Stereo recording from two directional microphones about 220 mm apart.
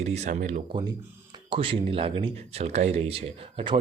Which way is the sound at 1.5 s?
25° right (ahead or behind).